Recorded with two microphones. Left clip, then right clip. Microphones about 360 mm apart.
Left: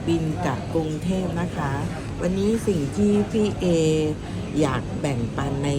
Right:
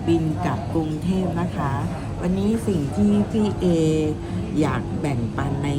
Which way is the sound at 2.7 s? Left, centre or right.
Centre.